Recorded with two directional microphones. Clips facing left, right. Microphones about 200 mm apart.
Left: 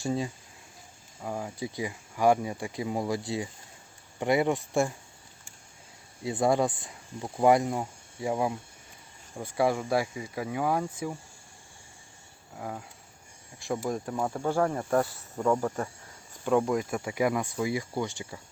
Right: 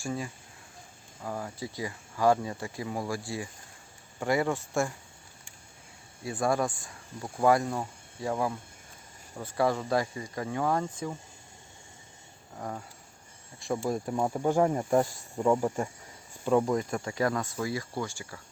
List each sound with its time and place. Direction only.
0.0 s speech: 25° left (ahead or behind)
1.2 s speech: 15° left (ahead or behind)
6.2 s speech: 20° left (ahead or behind)
12.5 s speech: 5° left (ahead or behind)
13.8 s speech: 10° right (ahead or behind)
16.5 s speech: centre (ahead or behind); by 18.3 s 20° left (ahead or behind)